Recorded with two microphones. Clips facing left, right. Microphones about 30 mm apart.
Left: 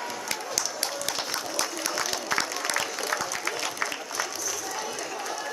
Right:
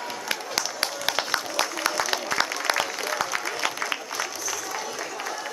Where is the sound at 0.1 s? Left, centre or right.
Centre.